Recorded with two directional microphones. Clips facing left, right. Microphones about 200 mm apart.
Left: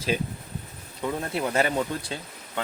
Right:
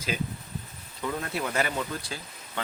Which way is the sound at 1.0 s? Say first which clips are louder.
Left 3 dB; 25° left (ahead or behind).